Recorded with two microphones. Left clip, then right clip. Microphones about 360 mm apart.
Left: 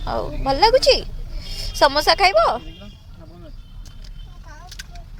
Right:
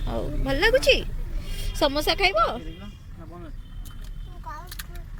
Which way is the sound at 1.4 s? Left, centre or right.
Centre.